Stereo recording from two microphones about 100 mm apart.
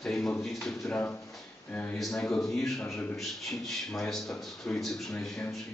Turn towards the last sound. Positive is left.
turn(degrees=5)  # may be behind; listen again after turning